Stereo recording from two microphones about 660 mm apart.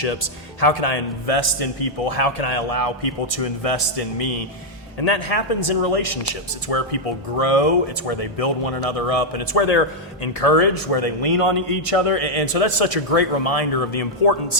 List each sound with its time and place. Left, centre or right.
0.0 s a man's voice: left